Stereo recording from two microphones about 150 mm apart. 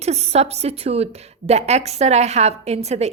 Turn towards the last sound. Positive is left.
turn(degrees=-45)  # may be behind; listen again after turning